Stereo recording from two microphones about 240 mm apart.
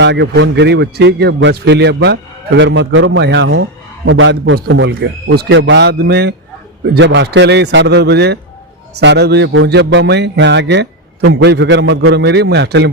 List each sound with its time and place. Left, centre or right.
0.0 s a man's voice: right